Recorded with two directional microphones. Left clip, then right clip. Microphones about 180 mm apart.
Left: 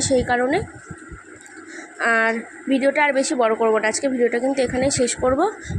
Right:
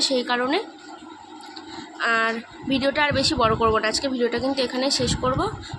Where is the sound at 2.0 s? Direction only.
30° left (ahead or behind).